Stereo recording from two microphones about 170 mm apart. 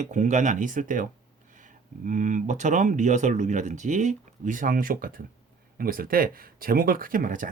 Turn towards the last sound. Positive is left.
turn(degrees=-50)  # may be behind; listen again after turning